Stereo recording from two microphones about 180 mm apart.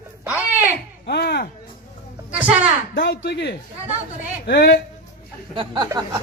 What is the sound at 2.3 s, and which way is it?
Speech, 5° right (ahead or behind).